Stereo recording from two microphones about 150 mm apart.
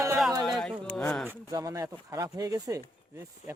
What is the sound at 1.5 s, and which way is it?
Speech, 25° right (ahead or behind).